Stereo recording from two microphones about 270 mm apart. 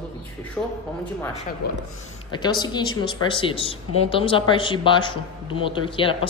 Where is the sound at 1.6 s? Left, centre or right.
Left.